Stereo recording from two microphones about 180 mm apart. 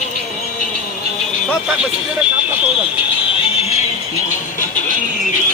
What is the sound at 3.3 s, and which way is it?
Music, 30° left (ahead or behind).